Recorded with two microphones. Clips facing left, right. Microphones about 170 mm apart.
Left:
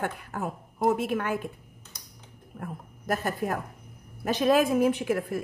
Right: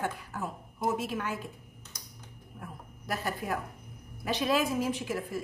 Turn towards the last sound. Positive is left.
turn(degrees=60)  # may be behind; listen again after turning